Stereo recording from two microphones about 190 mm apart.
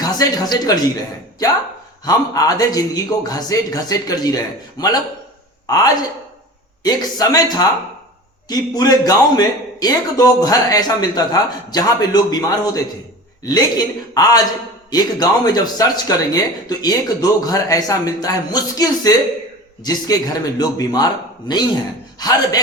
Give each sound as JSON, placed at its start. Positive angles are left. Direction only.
{"t": 0.0, "sound": "speech", "side_deg": 20}
{"t": 2.0, "sound": "a man's voice", "side_deg": 20}